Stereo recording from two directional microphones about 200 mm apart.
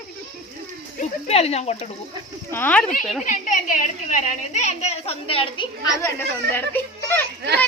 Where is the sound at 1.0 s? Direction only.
30° left (ahead or behind).